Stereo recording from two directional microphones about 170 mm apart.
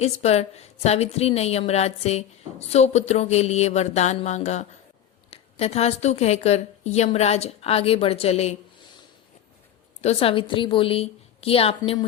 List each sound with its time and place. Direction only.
0.0 s a woman's voice: 40° left (ahead or behind)
10.0 s a woman's voice: 35° left (ahead or behind)